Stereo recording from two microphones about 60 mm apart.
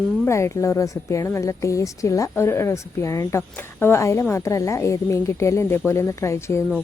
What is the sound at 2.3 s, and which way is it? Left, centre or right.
A woman's voice, left.